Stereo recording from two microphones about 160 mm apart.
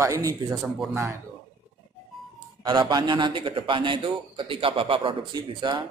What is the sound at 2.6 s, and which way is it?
A man's voice, 25° right (ahead or behind).